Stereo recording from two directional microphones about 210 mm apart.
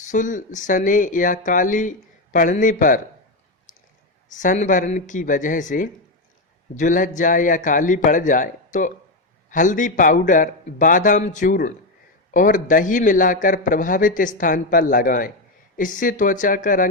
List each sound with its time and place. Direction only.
0.1 s speech: 35° left (ahead or behind)
4.3 s speech: 35° left (ahead or behind)